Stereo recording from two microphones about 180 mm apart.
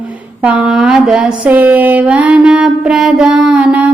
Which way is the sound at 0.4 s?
5° right (ahead or behind).